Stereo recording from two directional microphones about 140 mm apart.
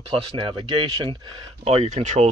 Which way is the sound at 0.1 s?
45° right (ahead or behind).